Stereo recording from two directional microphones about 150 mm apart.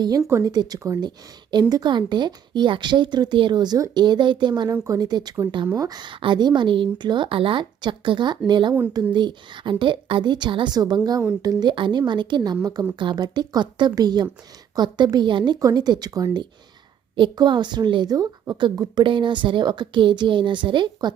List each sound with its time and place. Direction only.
0.3 s a woman's voice: 20° right (ahead or behind)
4.7 s a woman's voice: 20° right (ahead or behind)